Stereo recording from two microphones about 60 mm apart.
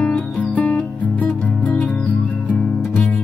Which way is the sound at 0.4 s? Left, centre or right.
Left.